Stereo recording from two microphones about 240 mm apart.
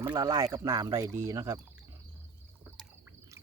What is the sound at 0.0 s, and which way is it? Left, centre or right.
Speech, centre.